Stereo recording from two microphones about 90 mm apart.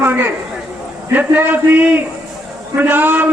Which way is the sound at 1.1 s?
20° right (ahead or behind).